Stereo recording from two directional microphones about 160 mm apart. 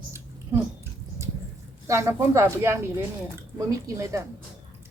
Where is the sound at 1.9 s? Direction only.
20° right (ahead or behind).